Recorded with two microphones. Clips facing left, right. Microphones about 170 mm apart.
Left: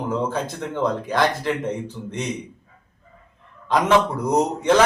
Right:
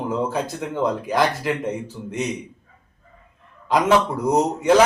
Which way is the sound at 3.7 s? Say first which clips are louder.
Even; 10° right (ahead or behind).